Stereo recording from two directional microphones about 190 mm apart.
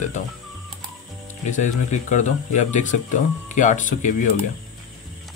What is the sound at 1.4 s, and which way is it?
Speech, 40° left (ahead or behind).